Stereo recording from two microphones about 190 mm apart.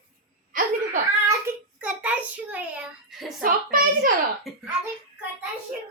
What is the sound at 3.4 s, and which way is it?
Speech, 50° right (ahead or behind).